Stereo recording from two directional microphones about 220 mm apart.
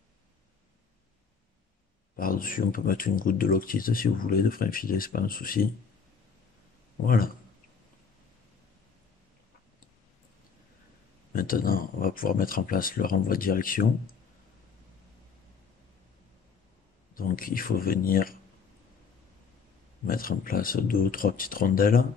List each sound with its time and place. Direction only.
2.1 s speech: 40° left (ahead or behind)
7.1 s speech: 40° left (ahead or behind)
11.3 s speech: 40° left (ahead or behind)
17.1 s speech: 40° left (ahead or behind)
20.1 s speech: 40° left (ahead or behind)